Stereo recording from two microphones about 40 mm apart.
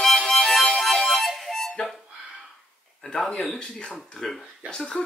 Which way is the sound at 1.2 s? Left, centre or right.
Centre.